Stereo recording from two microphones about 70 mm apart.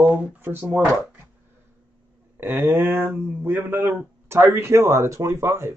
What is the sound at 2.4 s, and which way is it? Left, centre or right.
Speech, right.